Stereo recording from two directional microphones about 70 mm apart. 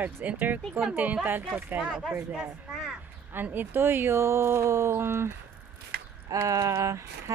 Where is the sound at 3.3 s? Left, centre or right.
Right.